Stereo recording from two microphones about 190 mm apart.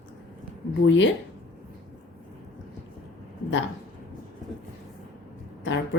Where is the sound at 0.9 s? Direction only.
75° left (ahead or behind).